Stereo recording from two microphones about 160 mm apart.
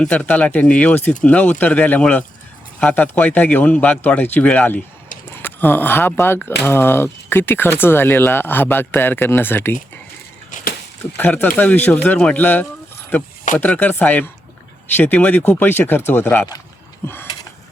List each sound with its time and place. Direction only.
0.0 s speech: 5° left (ahead or behind)
10.5 s a sound: 55° left (ahead or behind)
11.2 s speech: 10° left (ahead or behind)